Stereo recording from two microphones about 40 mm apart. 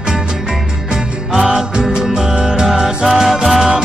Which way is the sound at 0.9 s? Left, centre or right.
Centre.